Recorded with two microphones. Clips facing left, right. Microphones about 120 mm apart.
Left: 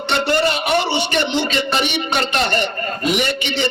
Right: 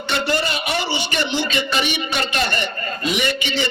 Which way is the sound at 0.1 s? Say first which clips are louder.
Left 4 dB; 55° left (ahead or behind).